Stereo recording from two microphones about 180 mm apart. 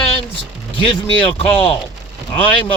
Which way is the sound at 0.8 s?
30° left (ahead or behind).